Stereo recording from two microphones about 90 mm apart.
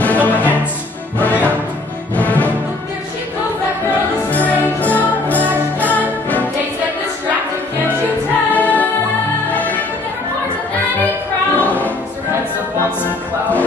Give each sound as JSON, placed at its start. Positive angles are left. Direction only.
{"t": 0.0, "sound": "music", "side_deg": 15}
{"t": 4.3, "sound": "music", "side_deg": 20}
{"t": 8.5, "sound": "music", "side_deg": 20}
{"t": 11.5, "sound": "music", "side_deg": 15}